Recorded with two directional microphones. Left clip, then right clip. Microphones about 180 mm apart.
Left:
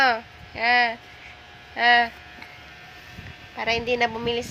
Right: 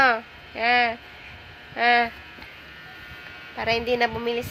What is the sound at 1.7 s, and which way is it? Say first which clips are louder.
Speech: left 2 dB; 20° right (ahead or behind).